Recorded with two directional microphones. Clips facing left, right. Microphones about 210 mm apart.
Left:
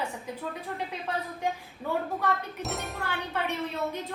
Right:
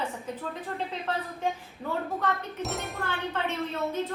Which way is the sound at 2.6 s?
Centre (ahead or behind).